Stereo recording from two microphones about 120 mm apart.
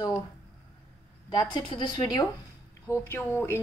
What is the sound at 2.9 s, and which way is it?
Speech, 20° left (ahead or behind).